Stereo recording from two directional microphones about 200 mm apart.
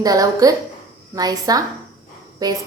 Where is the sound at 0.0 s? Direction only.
15° right (ahead or behind).